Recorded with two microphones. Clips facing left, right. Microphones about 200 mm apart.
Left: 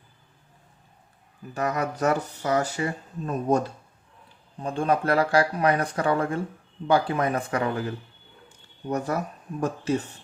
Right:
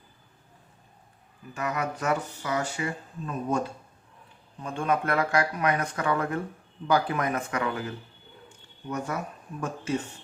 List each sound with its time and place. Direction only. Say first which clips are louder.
1.5 s speech: left 4 dB; 40° left (ahead or behind)
4.6 s speech: left 3 dB; 35° left (ahead or behind)